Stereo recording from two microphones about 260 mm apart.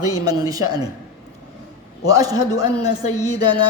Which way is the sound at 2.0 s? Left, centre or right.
Centre.